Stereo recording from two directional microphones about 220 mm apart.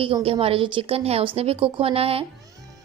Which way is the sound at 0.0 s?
25° right (ahead or behind).